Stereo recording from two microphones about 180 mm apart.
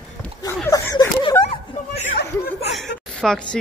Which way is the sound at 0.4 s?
20° left (ahead or behind).